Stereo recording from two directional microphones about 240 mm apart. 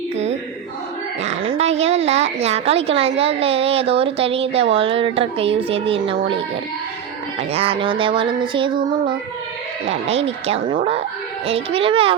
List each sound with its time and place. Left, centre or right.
1.2 s a woman's voice: right
7.5 s a woman's voice: right